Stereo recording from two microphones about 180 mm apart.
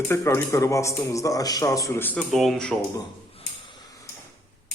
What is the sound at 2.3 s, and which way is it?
Speech, centre (ahead or behind).